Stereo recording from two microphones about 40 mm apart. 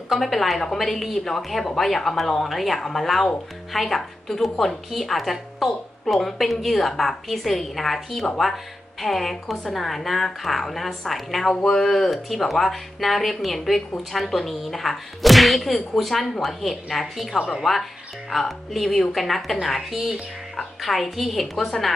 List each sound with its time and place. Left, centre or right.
0.1 s a woman's voice: centre